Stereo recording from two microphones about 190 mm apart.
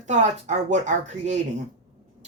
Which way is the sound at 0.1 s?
40° right (ahead or behind).